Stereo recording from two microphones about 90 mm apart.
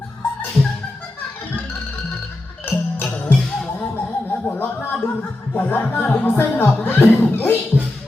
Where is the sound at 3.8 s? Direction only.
20° left (ahead or behind).